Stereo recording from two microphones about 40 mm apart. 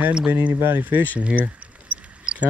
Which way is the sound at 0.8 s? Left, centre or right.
Right.